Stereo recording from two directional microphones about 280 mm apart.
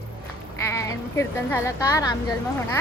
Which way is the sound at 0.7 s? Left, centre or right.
Centre.